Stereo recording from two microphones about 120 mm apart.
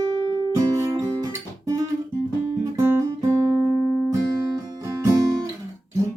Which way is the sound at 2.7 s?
20° right (ahead or behind).